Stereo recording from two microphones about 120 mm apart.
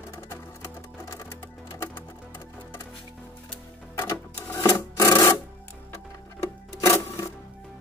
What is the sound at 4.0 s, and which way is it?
Rub, 20° left (ahead or behind).